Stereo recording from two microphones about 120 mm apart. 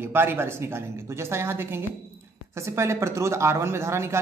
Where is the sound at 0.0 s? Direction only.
20° right (ahead or behind).